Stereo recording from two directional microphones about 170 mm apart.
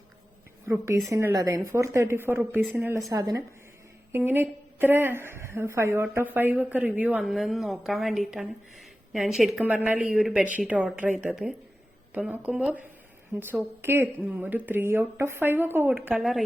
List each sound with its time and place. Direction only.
0.6 s a woman's voice: 15° right (ahead or behind)
13.8 s a woman's voice: 15° right (ahead or behind)